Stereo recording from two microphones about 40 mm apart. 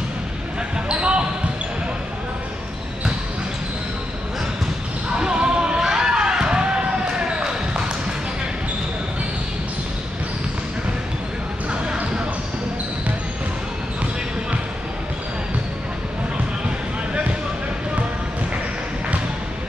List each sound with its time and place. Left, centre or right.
0.8 s basketball bounce: right
5.1 s basketball bounce: right
11.8 s basketball bounce: right